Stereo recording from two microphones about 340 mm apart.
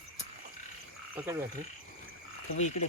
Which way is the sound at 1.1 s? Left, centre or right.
Centre.